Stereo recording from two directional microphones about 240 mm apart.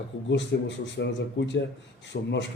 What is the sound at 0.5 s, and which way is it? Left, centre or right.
A man's voice, left.